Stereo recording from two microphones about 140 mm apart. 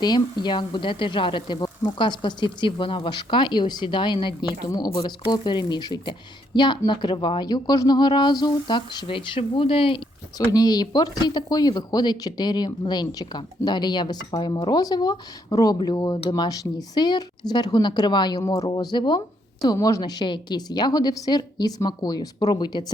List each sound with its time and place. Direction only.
0.0 s speech: 30° left (ahead or behind)
10.3 s a woman's voice: 30° left (ahead or behind)